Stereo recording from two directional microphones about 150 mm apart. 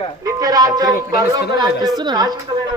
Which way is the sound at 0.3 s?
25° right (ahead or behind).